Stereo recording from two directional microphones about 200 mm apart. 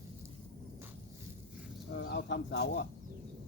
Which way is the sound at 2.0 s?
60° left (ahead or behind).